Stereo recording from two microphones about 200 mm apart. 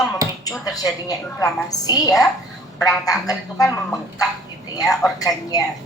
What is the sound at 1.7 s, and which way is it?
A woman's voice, 20° left (ahead or behind).